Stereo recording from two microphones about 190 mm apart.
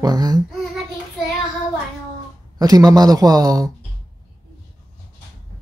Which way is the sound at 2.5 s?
20° right (ahead or behind).